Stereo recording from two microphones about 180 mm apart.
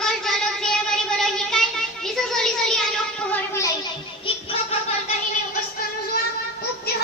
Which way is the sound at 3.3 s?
15° left (ahead or behind).